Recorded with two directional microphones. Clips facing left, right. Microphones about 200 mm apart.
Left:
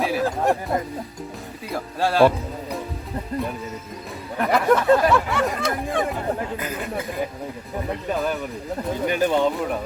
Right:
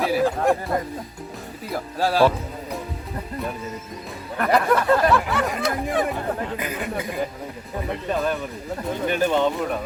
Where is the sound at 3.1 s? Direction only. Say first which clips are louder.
Left 3 dB; 20° left (ahead or behind).